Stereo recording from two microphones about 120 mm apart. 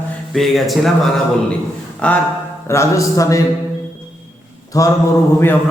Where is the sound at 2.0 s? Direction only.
10° left (ahead or behind).